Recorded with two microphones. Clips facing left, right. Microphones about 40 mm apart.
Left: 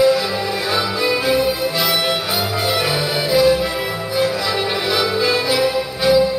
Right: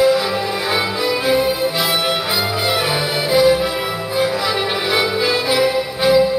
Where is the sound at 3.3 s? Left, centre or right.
Right.